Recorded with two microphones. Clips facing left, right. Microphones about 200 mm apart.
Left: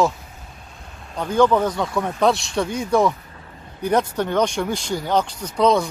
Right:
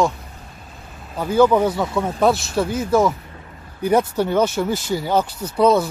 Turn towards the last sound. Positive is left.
turn(degrees=-5)  # may be behind; listen again after turning